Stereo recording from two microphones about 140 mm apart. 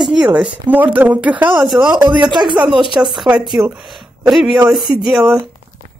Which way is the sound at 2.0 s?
30° right (ahead or behind).